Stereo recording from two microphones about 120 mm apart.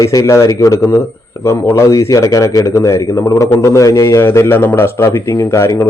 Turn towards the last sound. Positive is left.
turn(degrees=25)  # may be behind; listen again after turning